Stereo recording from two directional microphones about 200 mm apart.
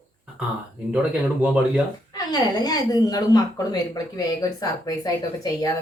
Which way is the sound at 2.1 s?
20° left (ahead or behind).